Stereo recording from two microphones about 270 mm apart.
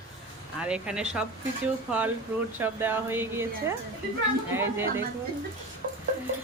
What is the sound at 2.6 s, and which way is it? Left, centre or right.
Speech, centre.